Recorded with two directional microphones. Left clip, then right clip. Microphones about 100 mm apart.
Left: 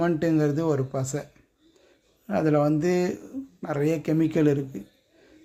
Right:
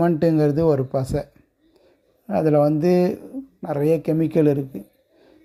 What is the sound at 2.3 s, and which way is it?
Speech, 40° right (ahead or behind).